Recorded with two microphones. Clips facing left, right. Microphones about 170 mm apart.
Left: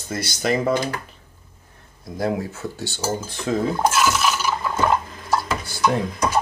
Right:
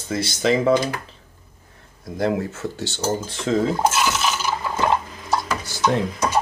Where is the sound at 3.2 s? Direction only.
25° right (ahead or behind).